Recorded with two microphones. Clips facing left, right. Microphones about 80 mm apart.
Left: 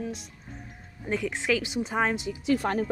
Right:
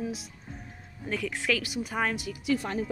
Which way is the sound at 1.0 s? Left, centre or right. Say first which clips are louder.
Left 2 dB; left.